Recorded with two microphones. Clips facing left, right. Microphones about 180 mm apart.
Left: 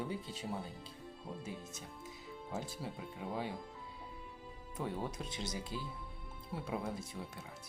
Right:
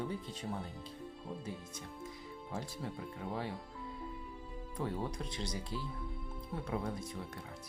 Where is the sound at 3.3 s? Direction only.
Centre (ahead or behind).